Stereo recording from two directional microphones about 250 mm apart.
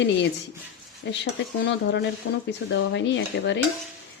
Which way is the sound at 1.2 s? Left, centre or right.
Left.